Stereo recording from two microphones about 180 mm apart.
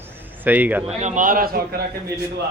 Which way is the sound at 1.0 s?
45° right (ahead or behind).